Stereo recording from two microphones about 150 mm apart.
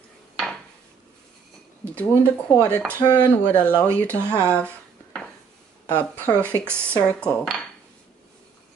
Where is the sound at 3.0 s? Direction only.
25° left (ahead or behind).